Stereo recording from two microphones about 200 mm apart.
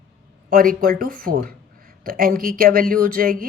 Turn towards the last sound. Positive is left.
turn(degrees=-45)  # may be behind; listen again after turning